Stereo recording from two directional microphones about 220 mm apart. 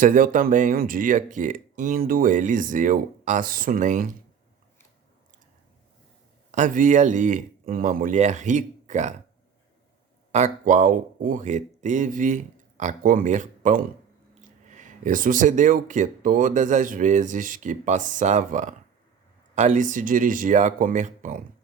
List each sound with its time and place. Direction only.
0.0 s speech: 40° right (ahead or behind)
6.5 s speech: 35° right (ahead or behind)
10.3 s speech: 30° right (ahead or behind)